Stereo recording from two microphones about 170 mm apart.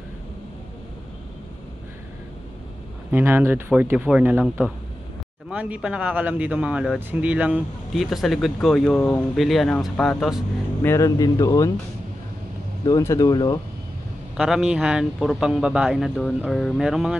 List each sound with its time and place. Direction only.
3.1 s speech: 10° right (ahead or behind)
10.8 s speech: 15° left (ahead or behind)
12.8 s speech: 20° left (ahead or behind)
14.3 s speech: 5° right (ahead or behind)